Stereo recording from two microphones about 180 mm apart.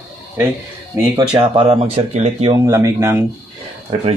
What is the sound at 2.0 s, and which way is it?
Speech, 40° right (ahead or behind).